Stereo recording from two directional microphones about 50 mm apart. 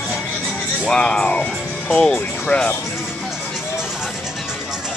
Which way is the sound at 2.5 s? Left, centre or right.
Left.